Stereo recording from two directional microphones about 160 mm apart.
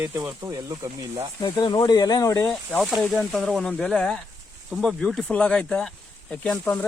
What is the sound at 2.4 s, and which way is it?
Speech, 5° left (ahead or behind).